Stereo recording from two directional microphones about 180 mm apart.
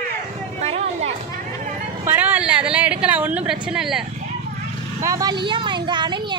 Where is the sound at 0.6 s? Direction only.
35° right (ahead or behind).